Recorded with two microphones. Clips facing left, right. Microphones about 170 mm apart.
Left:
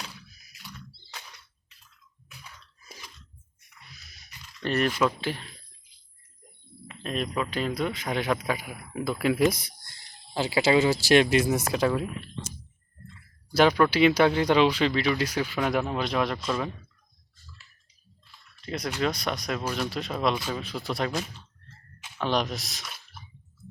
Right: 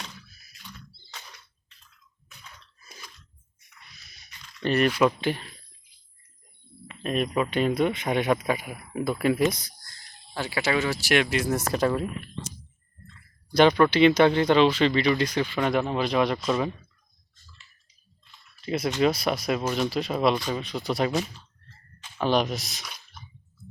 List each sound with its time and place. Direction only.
0.3 s a sound: 10° left (ahead or behind)
2.3 s a sound: 5° left (ahead or behind); by 5.4 s 10° right (ahead or behind)
7.0 s speech: 10° right (ahead or behind)
9.6 s speech: 25° left (ahead or behind)
11.4 s speech: 10° left (ahead or behind)
13.1 s speech: 5° left (ahead or behind)
18.3 s drip: 5° right (ahead or behind)
19.0 s speech: 5° right (ahead or behind)